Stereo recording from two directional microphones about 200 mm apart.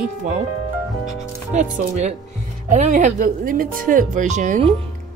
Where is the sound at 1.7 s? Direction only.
35° right (ahead or behind).